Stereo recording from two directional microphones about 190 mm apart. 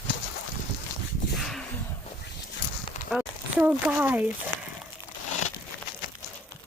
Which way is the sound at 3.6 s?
10° right (ahead or behind).